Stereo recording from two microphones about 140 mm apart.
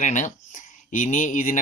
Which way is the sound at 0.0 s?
60° left (ahead or behind).